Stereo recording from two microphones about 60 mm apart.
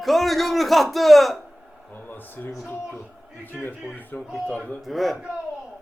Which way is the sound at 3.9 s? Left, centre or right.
Left.